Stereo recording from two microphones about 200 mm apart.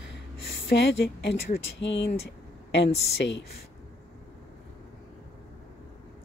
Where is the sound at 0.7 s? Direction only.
55° left (ahead or behind).